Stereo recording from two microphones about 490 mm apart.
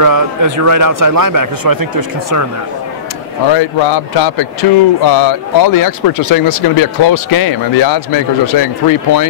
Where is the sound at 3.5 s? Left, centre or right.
Left.